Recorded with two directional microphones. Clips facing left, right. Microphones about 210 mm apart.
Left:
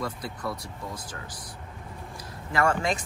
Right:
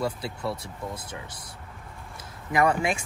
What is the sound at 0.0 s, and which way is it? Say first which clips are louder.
Speech: right 3 dB; 30° right (ahead or behind).